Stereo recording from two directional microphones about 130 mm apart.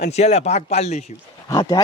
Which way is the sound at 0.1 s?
60° left (ahead or behind).